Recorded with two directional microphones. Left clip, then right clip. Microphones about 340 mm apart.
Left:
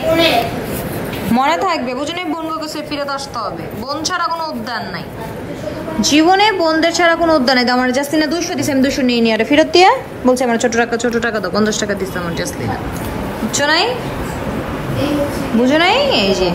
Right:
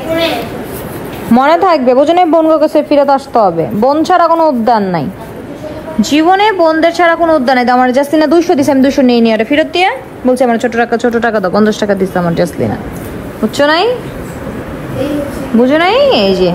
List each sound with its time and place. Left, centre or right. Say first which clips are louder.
1.3 s a woman's voice: right 7 dB; centre
3.1 s a woman's voice: right 13 dB; right
5.9 s a woman's voice: right 3 dB; centre
13.6 s a woman's voice: right 5 dB; centre
15.6 s a woman's voice: right 5 dB; centre